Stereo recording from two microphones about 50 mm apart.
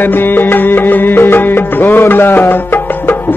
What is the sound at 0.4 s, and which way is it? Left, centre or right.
Music, left.